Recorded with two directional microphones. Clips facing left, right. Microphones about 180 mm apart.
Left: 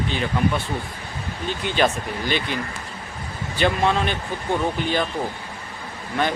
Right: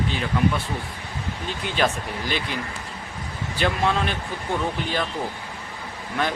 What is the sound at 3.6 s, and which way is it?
Speech, centre (ahead or behind).